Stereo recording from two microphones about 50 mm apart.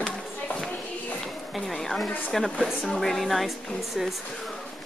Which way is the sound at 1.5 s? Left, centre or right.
Centre.